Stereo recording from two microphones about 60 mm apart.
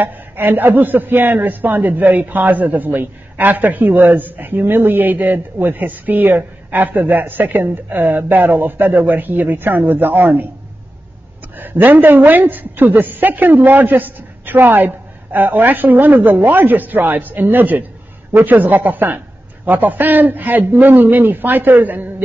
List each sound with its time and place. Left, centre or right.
0.0 s a man's voice: right
11.5 s a man's voice: right